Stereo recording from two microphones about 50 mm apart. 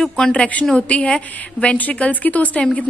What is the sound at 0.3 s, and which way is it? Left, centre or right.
A woman's voice, left.